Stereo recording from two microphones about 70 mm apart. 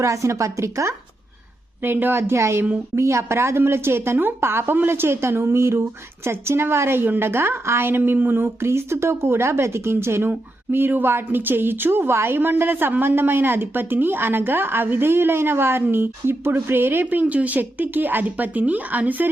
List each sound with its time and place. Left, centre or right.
0.0 s a woman's voice: right
1.8 s speech: right
8.6 s speech: right